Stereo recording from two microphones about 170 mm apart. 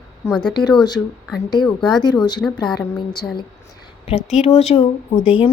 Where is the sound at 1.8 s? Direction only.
25° left (ahead or behind).